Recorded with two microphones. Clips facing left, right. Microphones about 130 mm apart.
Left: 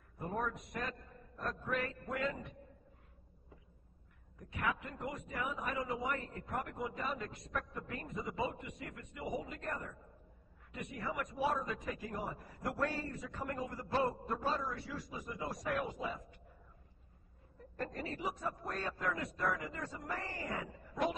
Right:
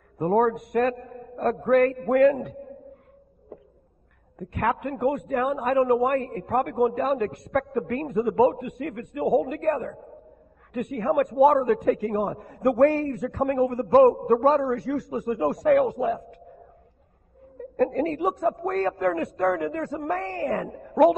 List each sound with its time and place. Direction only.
0.2 s a man's voice: 60° right (ahead or behind)
4.4 s a man's voice: 60° right (ahead or behind)
15.1 s a man's voice: 70° right (ahead or behind)
17.6 s a man's voice: 70° right (ahead or behind)